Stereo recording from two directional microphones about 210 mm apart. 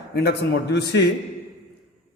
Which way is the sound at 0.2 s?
50° left (ahead or behind).